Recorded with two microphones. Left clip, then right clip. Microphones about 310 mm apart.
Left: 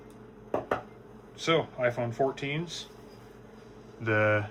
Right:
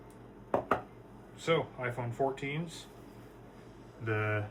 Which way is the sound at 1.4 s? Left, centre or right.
Centre.